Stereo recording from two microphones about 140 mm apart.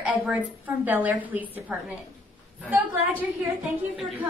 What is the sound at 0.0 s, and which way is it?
A woman's voice, 5° right (ahead or behind).